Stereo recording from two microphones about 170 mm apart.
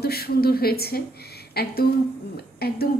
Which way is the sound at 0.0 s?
65° left (ahead or behind).